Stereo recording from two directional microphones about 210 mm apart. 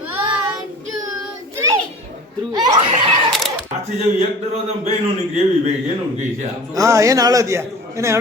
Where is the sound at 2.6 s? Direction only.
35° right (ahead or behind).